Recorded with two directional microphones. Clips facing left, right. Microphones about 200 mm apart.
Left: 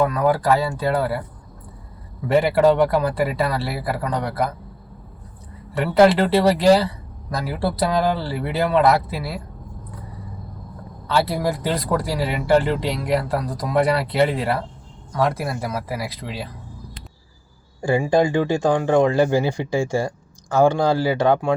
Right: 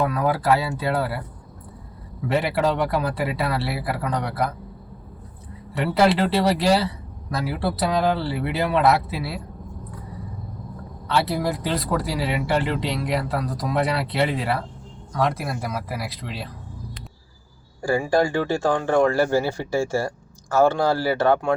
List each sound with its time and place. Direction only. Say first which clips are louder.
0.1 s speech: left 2 dB; 5° right (ahead or behind)
2.2 s speech: left 6 dB; centre (ahead or behind)
5.7 s speech: left 4 dB; 5° right (ahead or behind)
11.1 s speech: left 2 dB; centre (ahead or behind)
17.7 s speech: left 2 dB; 20° left (ahead or behind)